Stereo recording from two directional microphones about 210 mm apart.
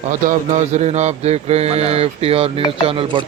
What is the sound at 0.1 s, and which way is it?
Speech, 40° right (ahead or behind).